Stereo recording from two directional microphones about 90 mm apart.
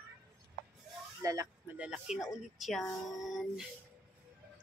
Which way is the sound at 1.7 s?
10° right (ahead or behind).